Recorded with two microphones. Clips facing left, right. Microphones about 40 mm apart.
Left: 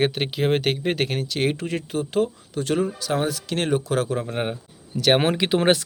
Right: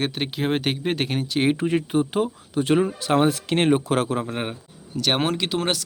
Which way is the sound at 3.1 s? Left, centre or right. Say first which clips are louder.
Right 5 dB; right.